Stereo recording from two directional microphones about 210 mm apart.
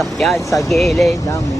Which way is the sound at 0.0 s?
Centre (ahead or behind).